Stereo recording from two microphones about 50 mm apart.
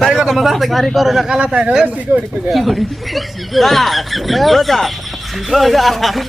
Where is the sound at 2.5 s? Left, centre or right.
Centre.